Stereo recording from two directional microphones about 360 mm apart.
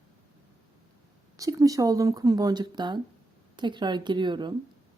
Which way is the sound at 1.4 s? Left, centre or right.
Centre.